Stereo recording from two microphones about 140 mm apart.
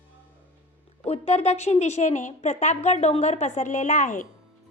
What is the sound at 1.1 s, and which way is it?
A woman's voice, 50° left (ahead or behind).